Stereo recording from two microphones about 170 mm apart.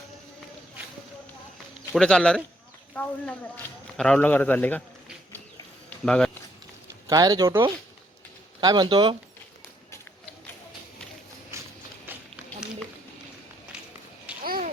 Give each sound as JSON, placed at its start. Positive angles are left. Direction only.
{"t": 1.9, "sound": "a man's voice", "side_deg": 5}
{"t": 6.1, "sound": "speech", "side_deg": 5}
{"t": 7.1, "sound": "speech", "side_deg": -20}
{"t": 14.4, "sound": "babbling", "side_deg": -60}